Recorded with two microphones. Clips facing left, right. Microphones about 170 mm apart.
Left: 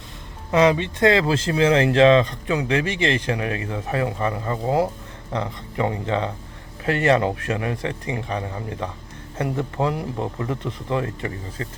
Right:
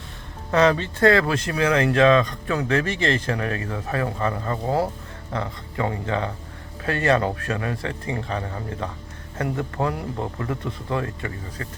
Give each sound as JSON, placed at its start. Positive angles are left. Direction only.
{"t": 0.5, "sound": "a man's voice", "side_deg": 15}